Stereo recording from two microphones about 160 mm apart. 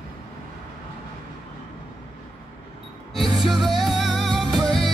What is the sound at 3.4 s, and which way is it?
Music, centre (ahead or behind).